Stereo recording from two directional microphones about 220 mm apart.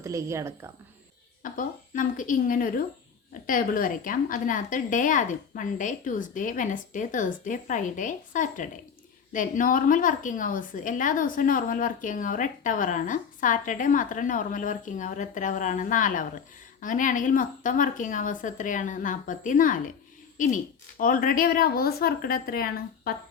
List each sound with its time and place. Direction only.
0.0 s a woman's voice: 15° right (ahead or behind)
1.4 s a woman's voice: 35° left (ahead or behind)